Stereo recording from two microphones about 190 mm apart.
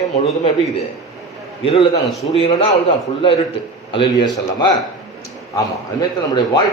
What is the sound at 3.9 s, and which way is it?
Speech, 25° left (ahead or behind).